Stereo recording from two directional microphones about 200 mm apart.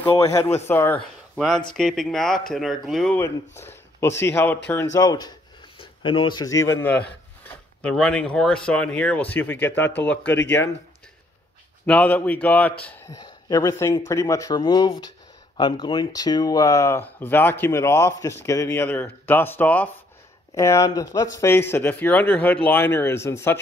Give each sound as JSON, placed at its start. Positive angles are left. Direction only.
{"t": 0.1, "sound": "speech", "side_deg": 15}
{"t": 11.8, "sound": "speech", "side_deg": 5}